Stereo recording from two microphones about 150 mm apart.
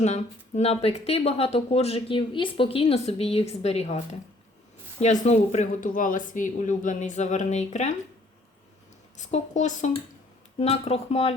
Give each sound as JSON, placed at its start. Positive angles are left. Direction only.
{"t": 0.0, "sound": "speech", "side_deg": 50}
{"t": 5.2, "sound": "speech", "side_deg": 50}
{"t": 9.3, "sound": "speech", "side_deg": 55}